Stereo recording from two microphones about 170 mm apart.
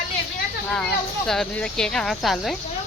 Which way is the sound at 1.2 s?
5° left (ahead or behind).